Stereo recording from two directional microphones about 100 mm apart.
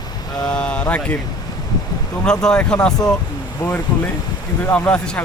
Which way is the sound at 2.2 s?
5° left (ahead or behind).